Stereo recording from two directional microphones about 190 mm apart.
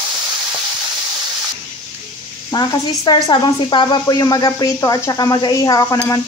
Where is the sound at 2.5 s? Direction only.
20° left (ahead or behind).